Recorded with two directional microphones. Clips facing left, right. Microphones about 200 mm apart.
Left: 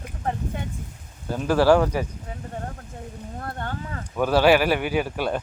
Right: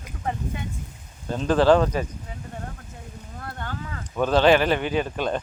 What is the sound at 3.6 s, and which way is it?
Speech, 50° left (ahead or behind).